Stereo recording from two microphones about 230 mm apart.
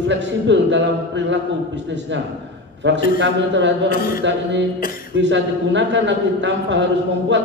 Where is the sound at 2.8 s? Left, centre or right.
Right.